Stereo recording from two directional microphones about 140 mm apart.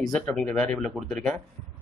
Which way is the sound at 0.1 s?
5° left (ahead or behind).